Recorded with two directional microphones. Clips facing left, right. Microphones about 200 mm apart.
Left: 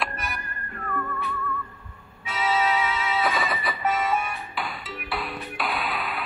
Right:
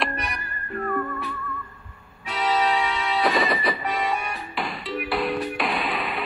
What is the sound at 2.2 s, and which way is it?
Music, centre (ahead or behind).